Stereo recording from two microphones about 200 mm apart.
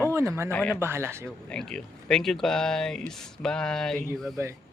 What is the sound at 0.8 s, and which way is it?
Speech, 10° right (ahead or behind).